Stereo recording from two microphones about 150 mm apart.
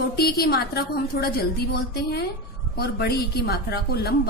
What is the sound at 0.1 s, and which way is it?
A woman's voice, 90° left.